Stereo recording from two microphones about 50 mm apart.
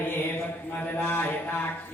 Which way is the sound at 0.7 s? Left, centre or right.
Left.